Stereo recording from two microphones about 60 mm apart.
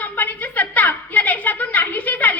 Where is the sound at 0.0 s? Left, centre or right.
Left.